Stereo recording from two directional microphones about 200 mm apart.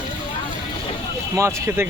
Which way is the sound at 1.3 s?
15° right (ahead or behind).